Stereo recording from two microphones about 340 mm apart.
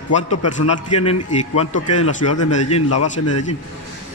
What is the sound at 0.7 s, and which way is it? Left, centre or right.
Speech, left.